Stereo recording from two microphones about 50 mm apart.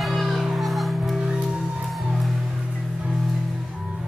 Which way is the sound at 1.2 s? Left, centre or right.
Centre.